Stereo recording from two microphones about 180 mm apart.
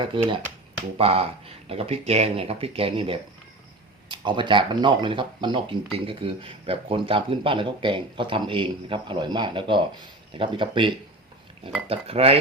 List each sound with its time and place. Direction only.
0.1 s speech: 30° right (ahead or behind)